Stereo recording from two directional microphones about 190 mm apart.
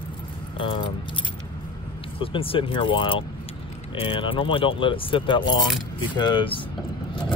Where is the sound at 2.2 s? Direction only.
30° left (ahead or behind).